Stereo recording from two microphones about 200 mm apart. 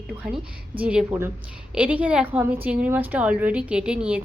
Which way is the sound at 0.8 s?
5° right (ahead or behind).